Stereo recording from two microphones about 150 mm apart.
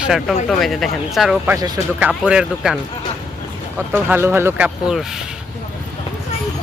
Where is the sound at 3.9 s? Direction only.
10° right (ahead or behind).